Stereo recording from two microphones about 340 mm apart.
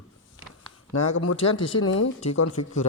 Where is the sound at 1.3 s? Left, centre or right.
Centre.